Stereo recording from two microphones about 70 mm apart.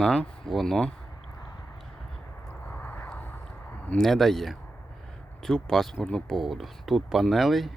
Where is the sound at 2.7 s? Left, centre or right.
Left.